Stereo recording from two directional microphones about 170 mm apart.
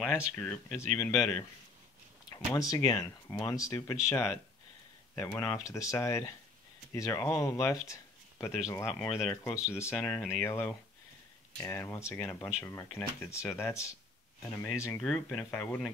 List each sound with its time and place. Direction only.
0.0 s speech: centre (ahead or behind)
0.7 s speech: 15° left (ahead or behind)